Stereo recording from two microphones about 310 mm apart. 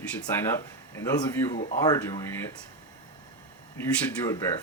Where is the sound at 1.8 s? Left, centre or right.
Centre.